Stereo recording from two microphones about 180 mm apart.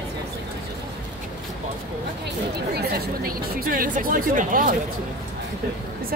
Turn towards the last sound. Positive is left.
turn(degrees=-50)  # may be behind; listen again after turning